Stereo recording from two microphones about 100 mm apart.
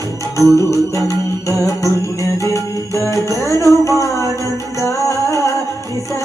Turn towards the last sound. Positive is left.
turn(degrees=30)  # may be behind; listen again after turning